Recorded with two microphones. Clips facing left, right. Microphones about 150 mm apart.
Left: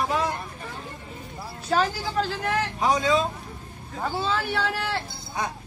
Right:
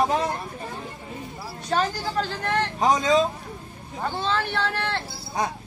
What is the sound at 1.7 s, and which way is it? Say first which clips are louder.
Speech: left 1 dB; 5° left (ahead or behind).